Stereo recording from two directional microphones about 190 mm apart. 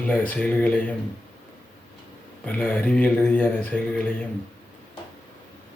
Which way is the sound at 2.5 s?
10° left (ahead or behind).